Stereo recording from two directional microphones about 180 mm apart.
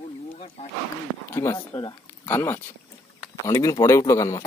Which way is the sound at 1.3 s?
20° left (ahead or behind).